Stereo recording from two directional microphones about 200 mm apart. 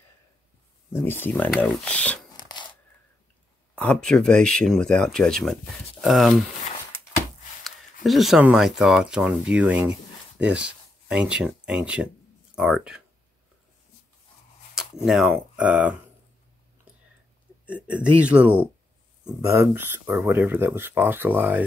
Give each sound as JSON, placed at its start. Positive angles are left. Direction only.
{"t": 0.9, "sound": "speech", "side_deg": 10}
{"t": 2.3, "sound": "a sound", "side_deg": 20}
{"t": 3.7, "sound": "speech", "side_deg": 5}
{"t": 7.6, "sound": "speech", "side_deg": 0}
{"t": 15.0, "sound": "speech", "side_deg": -5}
{"t": 17.9, "sound": "speech", "side_deg": -5}